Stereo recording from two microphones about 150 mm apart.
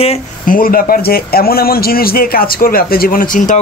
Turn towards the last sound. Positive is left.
turn(degrees=60)  # may be behind; listen again after turning